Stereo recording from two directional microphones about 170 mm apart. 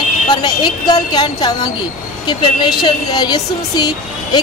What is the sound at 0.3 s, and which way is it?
A woman's voice, 25° left (ahead or behind).